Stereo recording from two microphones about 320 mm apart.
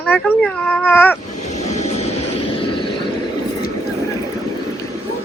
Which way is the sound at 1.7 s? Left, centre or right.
Centre.